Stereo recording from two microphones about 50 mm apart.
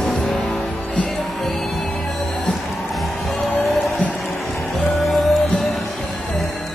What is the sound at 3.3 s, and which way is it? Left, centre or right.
Music, left.